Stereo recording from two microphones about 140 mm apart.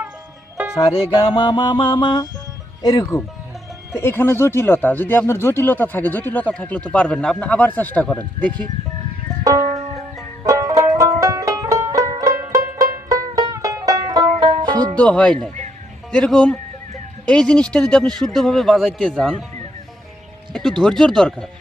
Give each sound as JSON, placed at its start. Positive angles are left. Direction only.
{"t": 0.9, "sound": "music", "side_deg": 35}
{"t": 2.8, "sound": "speech", "side_deg": 30}
{"t": 3.9, "sound": "speech", "side_deg": 15}
{"t": 9.4, "sound": "music", "side_deg": -25}
{"t": 14.9, "sound": "speech", "side_deg": 5}
{"t": 20.5, "sound": "speech", "side_deg": 0}